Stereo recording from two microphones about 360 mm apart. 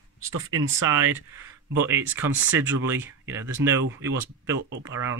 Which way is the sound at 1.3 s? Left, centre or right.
Centre.